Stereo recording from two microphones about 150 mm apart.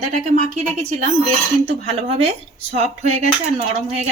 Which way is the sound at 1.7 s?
40° right (ahead or behind).